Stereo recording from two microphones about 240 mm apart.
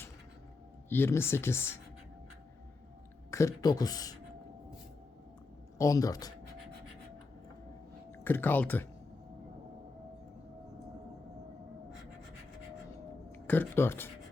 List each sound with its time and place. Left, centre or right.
0.9 s speech: centre
3.3 s speech: centre
5.7 s speech: centre
8.2 s speech: centre
13.3 s speech: centre